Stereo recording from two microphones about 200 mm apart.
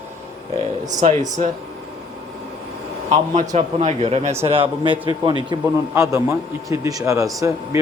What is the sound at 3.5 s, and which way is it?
A man's voice, 35° right (ahead or behind).